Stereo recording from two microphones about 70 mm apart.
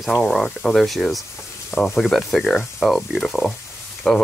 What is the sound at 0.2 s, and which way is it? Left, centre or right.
Speech, centre.